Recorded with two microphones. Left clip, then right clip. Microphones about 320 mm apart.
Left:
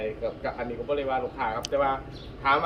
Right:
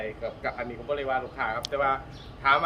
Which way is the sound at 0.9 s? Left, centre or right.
Centre.